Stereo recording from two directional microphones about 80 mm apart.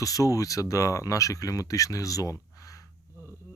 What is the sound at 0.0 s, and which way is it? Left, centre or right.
Speech, left.